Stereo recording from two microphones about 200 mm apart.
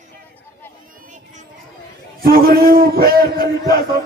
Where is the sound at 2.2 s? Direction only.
45° right (ahead or behind).